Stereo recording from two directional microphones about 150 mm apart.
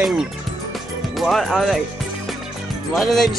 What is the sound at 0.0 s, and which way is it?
Speech, 5° right (ahead or behind).